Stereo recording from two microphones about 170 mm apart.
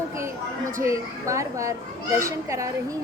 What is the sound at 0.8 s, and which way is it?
Speech, 20° right (ahead or behind).